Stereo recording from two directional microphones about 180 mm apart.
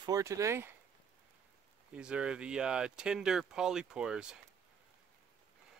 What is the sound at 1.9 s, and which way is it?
Speech, 5° right (ahead or behind).